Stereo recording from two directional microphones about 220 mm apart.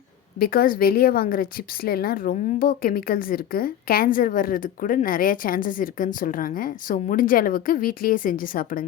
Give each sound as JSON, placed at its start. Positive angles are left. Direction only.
{"t": 0.3, "sound": "a woman's voice", "side_deg": 45}